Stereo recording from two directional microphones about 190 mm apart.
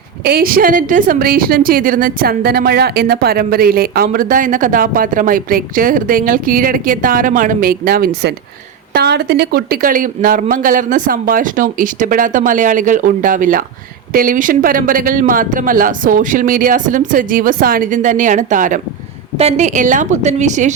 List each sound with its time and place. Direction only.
0.3 s a woman's voice: 50° right (ahead or behind)